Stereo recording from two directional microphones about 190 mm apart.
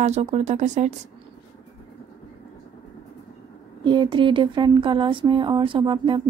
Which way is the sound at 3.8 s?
25° right (ahead or behind).